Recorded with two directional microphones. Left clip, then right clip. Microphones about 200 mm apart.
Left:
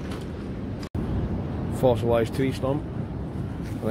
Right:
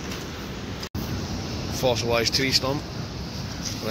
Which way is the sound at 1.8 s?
15° left (ahead or behind).